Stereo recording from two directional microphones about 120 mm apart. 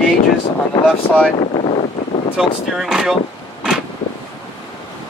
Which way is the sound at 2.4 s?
5° right (ahead or behind).